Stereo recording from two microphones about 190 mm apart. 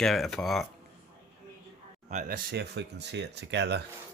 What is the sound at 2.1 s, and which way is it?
Speech, 45° right (ahead or behind).